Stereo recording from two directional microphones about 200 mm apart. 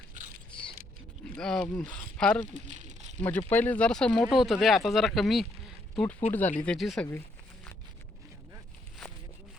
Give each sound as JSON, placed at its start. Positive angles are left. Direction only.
{"t": 1.4, "sound": "speech", "side_deg": 5}
{"t": 2.5, "sound": "a sound", "side_deg": -40}
{"t": 3.2, "sound": "speech", "side_deg": 10}